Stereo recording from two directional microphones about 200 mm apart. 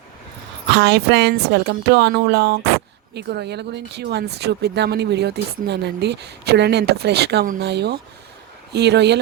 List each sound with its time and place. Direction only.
0.7 s speech: 55° right (ahead or behind)